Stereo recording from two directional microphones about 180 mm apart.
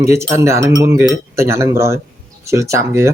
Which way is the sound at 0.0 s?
15° right (ahead or behind).